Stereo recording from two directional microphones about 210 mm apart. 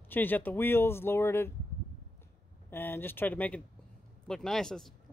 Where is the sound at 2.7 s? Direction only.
10° left (ahead or behind).